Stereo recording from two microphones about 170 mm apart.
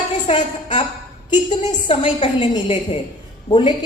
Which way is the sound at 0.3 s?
40° left (ahead or behind).